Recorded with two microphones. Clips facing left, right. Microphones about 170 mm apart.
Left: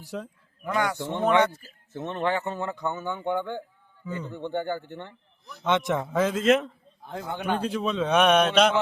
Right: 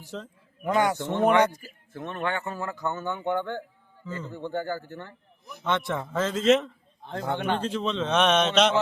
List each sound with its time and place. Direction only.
0.0 s a man's voice: 10° left (ahead or behind)
0.6 s a man's voice: 20° right (ahead or behind)
1.9 s a man's voice: 25° left (ahead or behind)
2.8 s a man's voice: 10° left (ahead or behind)
6.3 s a man's voice: 5° left (ahead or behind)